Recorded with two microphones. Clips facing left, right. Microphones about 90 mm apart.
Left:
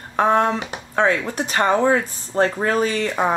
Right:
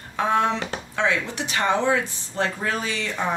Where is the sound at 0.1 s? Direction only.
40° left (ahead or behind).